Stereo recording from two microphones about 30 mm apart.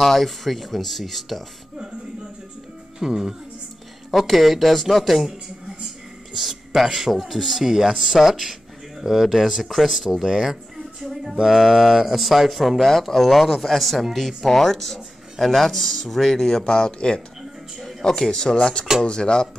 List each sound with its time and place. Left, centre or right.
0.0 s speech: centre
3.0 s speech: centre
4.1 s speech: centre
6.3 s speech: centre
10.1 s speech: centre
10.4 s a sound: centre
11.4 s speech: centre
12.8 s speech: centre
16.6 s speech: left
18.1 s speech: centre